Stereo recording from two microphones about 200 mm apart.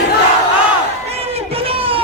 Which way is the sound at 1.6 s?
30° right (ahead or behind).